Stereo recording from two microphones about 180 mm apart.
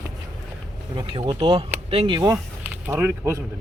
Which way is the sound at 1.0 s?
25° right (ahead or behind).